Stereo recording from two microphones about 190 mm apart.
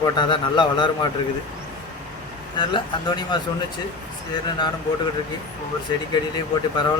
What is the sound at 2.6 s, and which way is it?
Speech, 25° left (ahead or behind).